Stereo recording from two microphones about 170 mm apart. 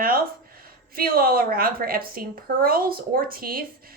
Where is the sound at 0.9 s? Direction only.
60° right (ahead or behind).